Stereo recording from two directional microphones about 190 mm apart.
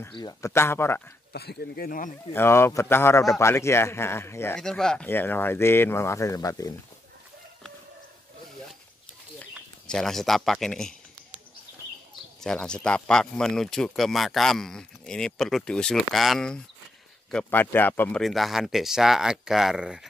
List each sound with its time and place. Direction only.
0.1 s a man's voice: 20° left (ahead or behind)
1.3 s speech: 55° left (ahead or behind)
2.3 s a man's voice: 15° left (ahead or behind)
9.5 s speech: centre (ahead or behind)
12.4 s speech: 5° left (ahead or behind)